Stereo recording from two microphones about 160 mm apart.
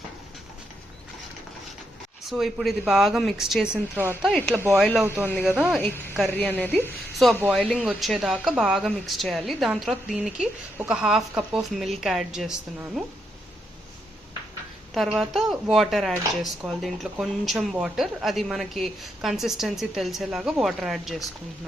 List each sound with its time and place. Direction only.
2.3 s speech: centre (ahead or behind)
4.3 s speech: 5° left (ahead or behind)
4.5 s speech: 15° right (ahead or behind)
5.5 s speech: 5° right (ahead or behind)
5.8 s speech: 10° left (ahead or behind)
7.4 s speech: 5° right (ahead or behind)
14.9 s speech: centre (ahead or behind)